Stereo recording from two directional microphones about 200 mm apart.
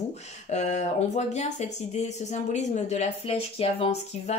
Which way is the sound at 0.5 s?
35° left (ahead or behind).